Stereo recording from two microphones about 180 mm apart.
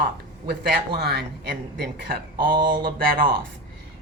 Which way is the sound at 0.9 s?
60° right (ahead or behind).